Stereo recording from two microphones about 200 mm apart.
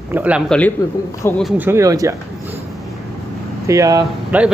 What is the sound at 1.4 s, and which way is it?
Speech, 10° right (ahead or behind).